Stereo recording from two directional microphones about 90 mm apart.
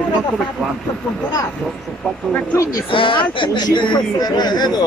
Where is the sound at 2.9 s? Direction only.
70° left (ahead or behind).